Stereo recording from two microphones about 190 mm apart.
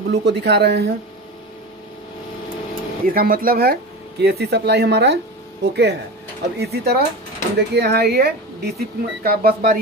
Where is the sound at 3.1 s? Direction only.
50° right (ahead or behind).